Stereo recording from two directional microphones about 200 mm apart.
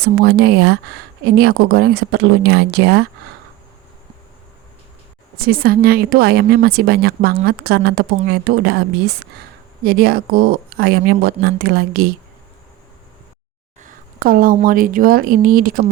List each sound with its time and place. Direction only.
0.0 s speech: 50° right (ahead or behind)
5.4 s speech: 45° right (ahead or behind)
13.8 s speech: 45° right (ahead or behind)